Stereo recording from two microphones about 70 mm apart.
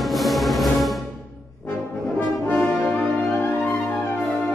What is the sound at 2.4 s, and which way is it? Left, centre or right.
Brass instrument, left.